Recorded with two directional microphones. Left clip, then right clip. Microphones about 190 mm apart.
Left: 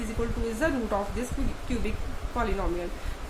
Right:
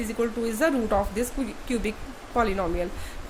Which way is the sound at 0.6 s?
50° right (ahead or behind).